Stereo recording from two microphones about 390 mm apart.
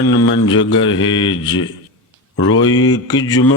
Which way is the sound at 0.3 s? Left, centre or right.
Left.